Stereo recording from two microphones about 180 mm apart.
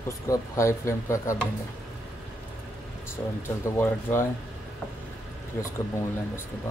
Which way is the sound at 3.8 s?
10° left (ahead or behind).